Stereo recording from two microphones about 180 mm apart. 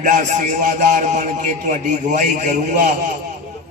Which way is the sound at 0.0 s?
45° right (ahead or behind).